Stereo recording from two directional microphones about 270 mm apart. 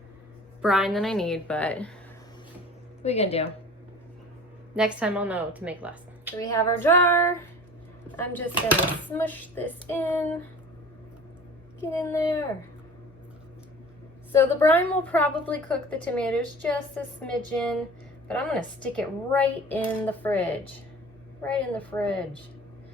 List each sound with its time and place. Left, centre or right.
0.6 s a woman's voice: centre
3.0 s speech: left
4.8 s a woman's voice: centre
6.4 s child singing: centre
8.0 s a sound: centre
9.1 s child singing: centre
11.8 s child singing: centre
14.3 s a woman's voice: centre